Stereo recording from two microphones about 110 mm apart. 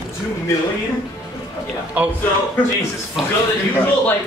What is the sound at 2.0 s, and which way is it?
Speech, 15° right (ahead or behind).